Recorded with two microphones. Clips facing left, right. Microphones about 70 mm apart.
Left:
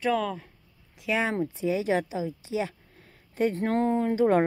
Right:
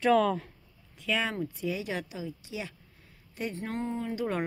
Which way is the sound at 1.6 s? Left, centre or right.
Left.